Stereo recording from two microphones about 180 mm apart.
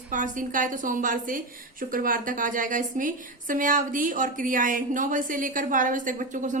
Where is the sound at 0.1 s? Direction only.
45° right (ahead or behind).